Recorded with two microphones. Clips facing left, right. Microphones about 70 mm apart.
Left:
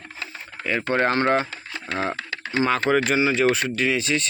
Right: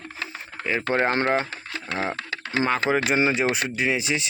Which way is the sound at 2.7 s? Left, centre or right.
Centre.